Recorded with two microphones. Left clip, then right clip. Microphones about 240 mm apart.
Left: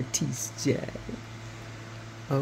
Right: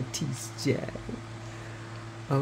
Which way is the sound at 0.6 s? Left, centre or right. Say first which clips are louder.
Left 1 dB; centre.